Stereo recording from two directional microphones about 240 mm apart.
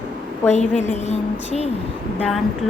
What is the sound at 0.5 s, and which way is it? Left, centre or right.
Speech, left.